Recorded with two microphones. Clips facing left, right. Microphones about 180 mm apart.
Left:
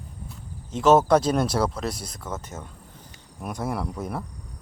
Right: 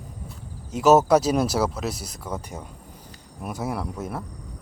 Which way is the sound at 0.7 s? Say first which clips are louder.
Right 1 dB; 5° right (ahead or behind).